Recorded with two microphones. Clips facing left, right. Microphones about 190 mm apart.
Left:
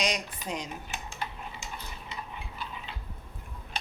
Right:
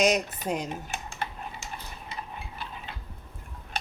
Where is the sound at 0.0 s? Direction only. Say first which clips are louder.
Right 8 dB; 50° right (ahead or behind).